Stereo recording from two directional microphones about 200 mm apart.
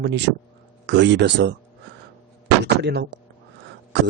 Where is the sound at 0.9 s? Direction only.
65° right (ahead or behind).